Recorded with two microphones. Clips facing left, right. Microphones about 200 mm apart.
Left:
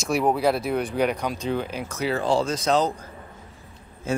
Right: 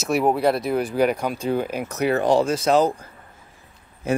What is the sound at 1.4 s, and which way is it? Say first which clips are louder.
Speech: right 4 dB; 45° right (ahead or behind).